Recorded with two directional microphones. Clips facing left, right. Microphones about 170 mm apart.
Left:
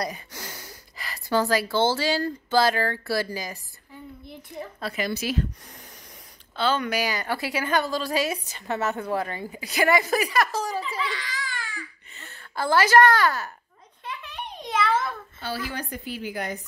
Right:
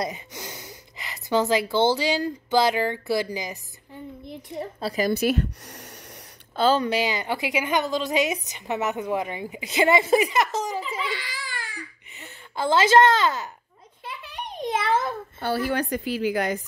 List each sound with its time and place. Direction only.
0.0 s speech: 20° right (ahead or behind)
4.6 s a woman's voice: 30° right (ahead or behind)
5.2 s speech: 70° right (ahead or behind)
6.5 s a woman's voice: 40° right (ahead or behind); by 10.8 s 20° right (ahead or behind)
11.1 s a woman's voice: 10° right (ahead or behind)
14.0 s a sound: 10° right (ahead or behind)
15.0 s a woman's voice: 55° right (ahead or behind); by 16.6 s 90° right